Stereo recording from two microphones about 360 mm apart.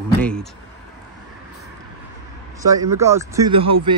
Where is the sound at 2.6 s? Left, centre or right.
Centre.